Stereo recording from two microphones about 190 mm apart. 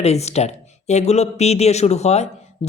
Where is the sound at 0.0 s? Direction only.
35° left (ahead or behind).